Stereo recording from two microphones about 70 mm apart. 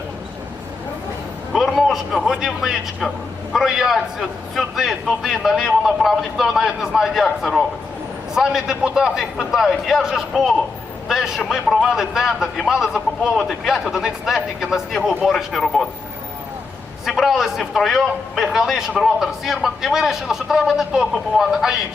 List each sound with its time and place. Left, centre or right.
1.5 s a man's voice: centre
17.1 s a man's voice: centre